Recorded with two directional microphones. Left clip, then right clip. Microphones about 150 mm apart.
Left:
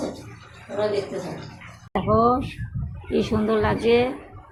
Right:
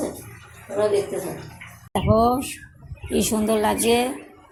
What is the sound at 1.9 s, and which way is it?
A woman's voice, 45° right (ahead or behind).